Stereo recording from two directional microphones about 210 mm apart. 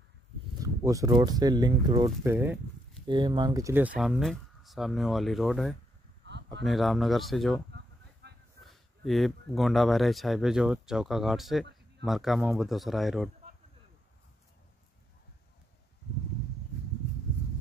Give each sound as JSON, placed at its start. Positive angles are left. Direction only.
{"t": 0.6, "sound": "speech", "side_deg": -15}
{"t": 3.1, "sound": "speech", "side_deg": -20}
{"t": 6.2, "sound": "a sound", "side_deg": -55}
{"t": 6.6, "sound": "speech", "side_deg": 0}
{"t": 7.7, "sound": "a sound", "side_deg": -55}
{"t": 8.6, "sound": "speech", "side_deg": 0}